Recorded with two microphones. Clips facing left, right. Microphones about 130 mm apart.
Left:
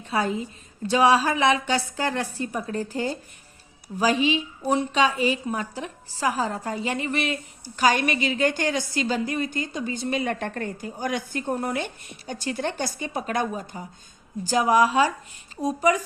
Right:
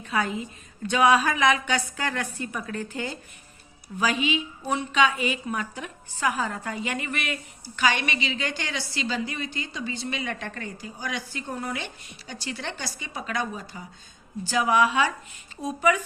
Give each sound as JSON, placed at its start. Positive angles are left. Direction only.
{"t": 0.0, "sound": "a woman's voice", "side_deg": 35}